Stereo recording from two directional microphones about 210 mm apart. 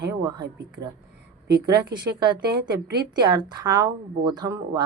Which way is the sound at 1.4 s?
50° right (ahead or behind).